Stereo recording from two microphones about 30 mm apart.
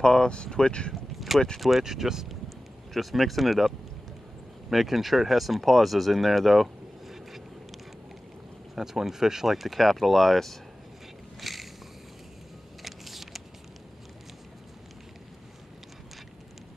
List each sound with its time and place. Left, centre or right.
0.0 s speech: left
1.8 s speech: centre
2.9 s speech: centre
8.7 s speech: centre
9.5 s speech: centre
11.4 s vehicle: centre
12.8 s a sound: centre